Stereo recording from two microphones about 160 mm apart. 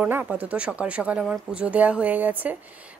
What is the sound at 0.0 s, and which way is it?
A woman's voice, 10° right (ahead or behind).